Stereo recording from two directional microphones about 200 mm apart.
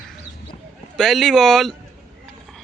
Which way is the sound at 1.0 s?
Centre (ahead or behind).